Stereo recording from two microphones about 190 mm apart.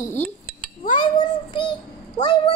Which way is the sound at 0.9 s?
25° left (ahead or behind).